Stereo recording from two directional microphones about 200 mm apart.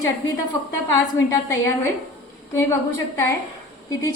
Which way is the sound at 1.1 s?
15° left (ahead or behind).